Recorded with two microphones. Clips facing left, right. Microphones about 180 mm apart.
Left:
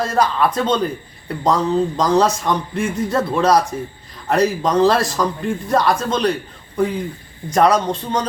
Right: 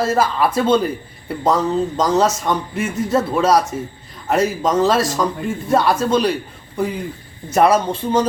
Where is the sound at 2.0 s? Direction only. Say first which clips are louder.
Right 1 dB; centre (ahead or behind).